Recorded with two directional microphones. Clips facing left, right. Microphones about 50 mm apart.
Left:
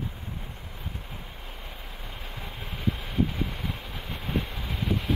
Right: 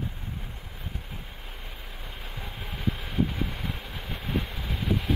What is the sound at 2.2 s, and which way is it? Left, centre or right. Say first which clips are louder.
Vehicle: even; centre.